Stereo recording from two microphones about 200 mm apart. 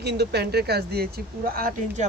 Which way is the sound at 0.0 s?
55° right (ahead or behind).